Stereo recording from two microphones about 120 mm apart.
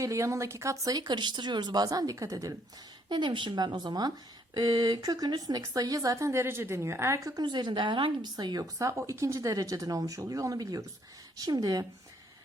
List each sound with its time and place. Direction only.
0.0 s speech: 25° right (ahead or behind)
3.1 s speech: 40° right (ahead or behind)